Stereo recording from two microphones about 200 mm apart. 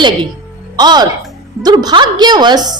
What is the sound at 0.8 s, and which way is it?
A woman's voice, 20° right (ahead or behind).